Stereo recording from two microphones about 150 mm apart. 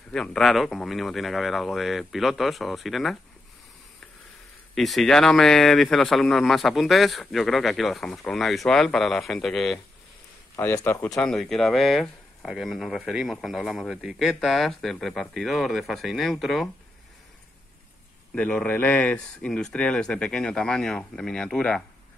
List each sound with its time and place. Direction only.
0.1 s speech: 5° left (ahead or behind)
4.7 s speech: centre (ahead or behind)
10.5 s speech: 20° left (ahead or behind)
11.1 s speech: 5° left (ahead or behind)
18.3 s speech: 10° left (ahead or behind)